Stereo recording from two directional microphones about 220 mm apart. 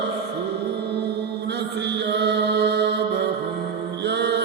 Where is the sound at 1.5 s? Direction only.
50° right (ahead or behind).